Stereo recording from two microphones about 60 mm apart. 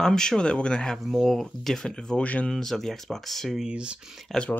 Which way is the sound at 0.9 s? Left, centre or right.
Centre.